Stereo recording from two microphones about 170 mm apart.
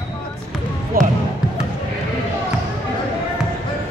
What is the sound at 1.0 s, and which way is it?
Basketball bounce, 60° right (ahead or behind).